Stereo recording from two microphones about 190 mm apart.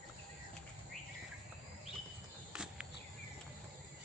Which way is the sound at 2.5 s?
5° right (ahead or behind).